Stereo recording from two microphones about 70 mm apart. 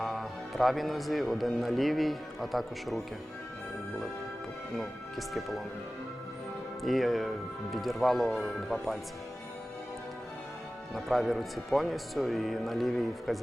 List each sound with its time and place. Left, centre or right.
0.0 s speech: centre
4.8 s speech: centre
6.8 s speech: centre
10.9 s speech: centre